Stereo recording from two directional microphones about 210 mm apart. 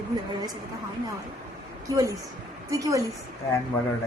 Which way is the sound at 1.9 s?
15° right (ahead or behind).